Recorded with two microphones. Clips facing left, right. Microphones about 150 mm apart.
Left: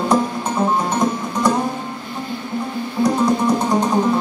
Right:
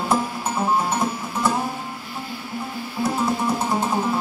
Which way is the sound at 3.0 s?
5° right (ahead or behind).